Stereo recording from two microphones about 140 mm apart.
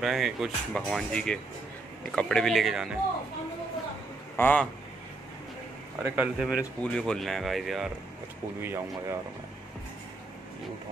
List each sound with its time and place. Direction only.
0.0 s speech: 5° right (ahead or behind)
4.4 s a man's voice: 10° left (ahead or behind)
6.0 s speech: 15° right (ahead or behind)
8.5 s speech: 15° right (ahead or behind)